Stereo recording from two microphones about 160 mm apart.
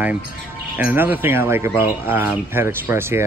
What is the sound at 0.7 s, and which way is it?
Speech, 10° right (ahead or behind).